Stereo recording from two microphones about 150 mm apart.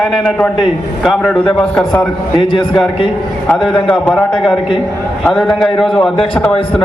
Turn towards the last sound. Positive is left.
turn(degrees=5)  # may be behind; listen again after turning